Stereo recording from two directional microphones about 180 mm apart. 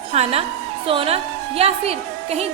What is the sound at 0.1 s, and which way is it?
Speech, 35° right (ahead or behind).